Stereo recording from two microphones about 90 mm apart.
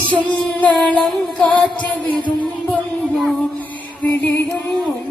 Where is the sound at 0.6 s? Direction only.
15° left (ahead or behind).